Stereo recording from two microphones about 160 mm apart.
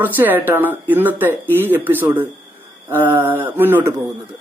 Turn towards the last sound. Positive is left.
turn(degrees=-15)  # may be behind; listen again after turning